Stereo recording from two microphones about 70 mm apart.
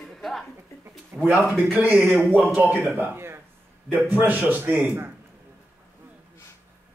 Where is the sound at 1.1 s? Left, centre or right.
Right.